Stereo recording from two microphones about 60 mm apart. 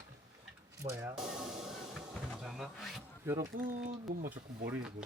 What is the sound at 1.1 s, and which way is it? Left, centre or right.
Music, centre.